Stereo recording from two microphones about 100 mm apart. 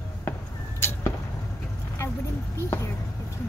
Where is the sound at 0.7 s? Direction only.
25° left (ahead or behind).